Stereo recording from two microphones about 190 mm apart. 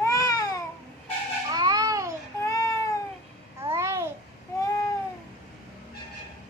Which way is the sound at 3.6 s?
15° right (ahead or behind).